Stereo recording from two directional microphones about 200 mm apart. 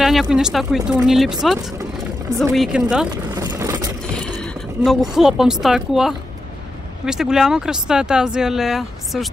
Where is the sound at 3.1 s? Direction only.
20° right (ahead or behind).